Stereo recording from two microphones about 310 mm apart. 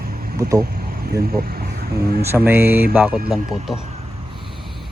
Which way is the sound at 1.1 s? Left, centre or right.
Right.